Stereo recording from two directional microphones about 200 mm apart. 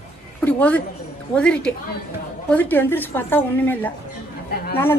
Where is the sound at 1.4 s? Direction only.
5° left (ahead or behind).